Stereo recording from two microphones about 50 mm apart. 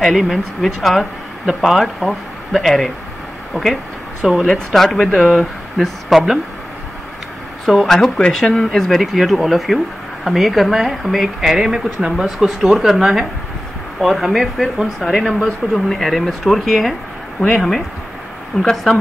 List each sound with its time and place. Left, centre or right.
0.0 s speech: centre
3.6 s speech: right
4.5 s speech: centre
7.6 s speech: centre